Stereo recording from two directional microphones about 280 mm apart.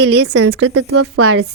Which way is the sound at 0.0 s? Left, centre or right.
Right.